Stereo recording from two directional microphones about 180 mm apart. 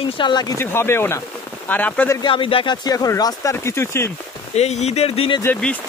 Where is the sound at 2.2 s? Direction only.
25° left (ahead or behind).